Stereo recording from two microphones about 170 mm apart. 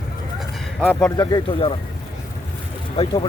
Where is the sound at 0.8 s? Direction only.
10° left (ahead or behind); by 1.7 s 30° left (ahead or behind).